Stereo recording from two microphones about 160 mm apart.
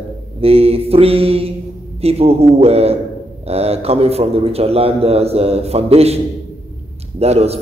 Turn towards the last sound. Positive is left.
turn(degrees=-40)  # may be behind; listen again after turning